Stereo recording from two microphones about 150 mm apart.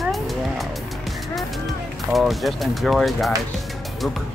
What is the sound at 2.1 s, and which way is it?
Speech, centre (ahead or behind).